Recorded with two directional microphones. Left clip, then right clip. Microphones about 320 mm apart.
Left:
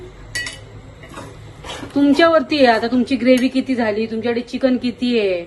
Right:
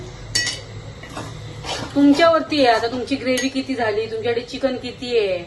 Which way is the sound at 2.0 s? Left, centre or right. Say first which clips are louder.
Left 1 dB; left.